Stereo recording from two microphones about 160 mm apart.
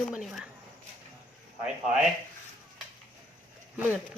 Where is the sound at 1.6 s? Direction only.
5° right (ahead or behind).